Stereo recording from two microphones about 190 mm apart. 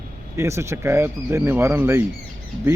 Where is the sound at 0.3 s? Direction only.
15° right (ahead or behind).